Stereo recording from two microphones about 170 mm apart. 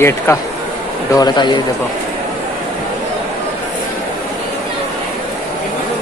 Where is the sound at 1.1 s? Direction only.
25° left (ahead or behind).